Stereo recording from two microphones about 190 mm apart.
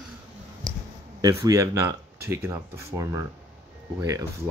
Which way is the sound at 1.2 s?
20° right (ahead or behind).